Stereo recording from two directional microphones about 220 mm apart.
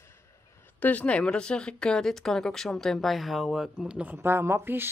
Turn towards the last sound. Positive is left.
turn(degrees=-10)  # may be behind; listen again after turning